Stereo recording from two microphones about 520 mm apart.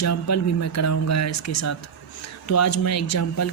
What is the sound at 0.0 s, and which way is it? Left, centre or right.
A woman's voice, left.